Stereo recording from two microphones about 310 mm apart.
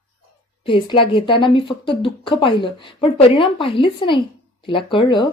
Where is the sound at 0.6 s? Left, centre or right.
Centre.